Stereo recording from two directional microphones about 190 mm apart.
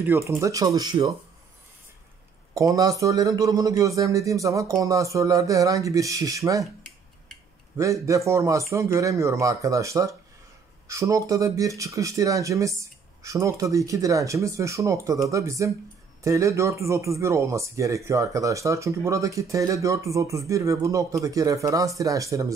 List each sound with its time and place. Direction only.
0.0 s speech: 10° right (ahead or behind)
2.5 s speech: 15° right (ahead or behind)
6.6 s a sound: centre (ahead or behind)
7.7 s speech: 15° right (ahead or behind)